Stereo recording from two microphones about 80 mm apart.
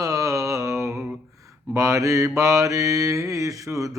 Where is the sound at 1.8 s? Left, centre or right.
Right.